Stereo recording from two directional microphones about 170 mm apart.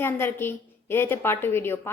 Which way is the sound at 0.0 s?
15° left (ahead or behind).